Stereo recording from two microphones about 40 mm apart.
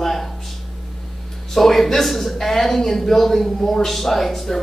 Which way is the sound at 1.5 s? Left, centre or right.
Centre.